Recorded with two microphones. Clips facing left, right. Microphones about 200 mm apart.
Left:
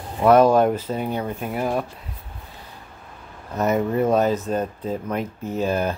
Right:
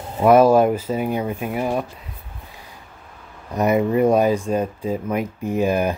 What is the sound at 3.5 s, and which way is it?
Speech, 10° right (ahead or behind).